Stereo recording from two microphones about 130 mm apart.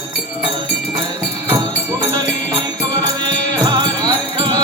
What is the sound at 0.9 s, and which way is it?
Music, 35° right (ahead or behind).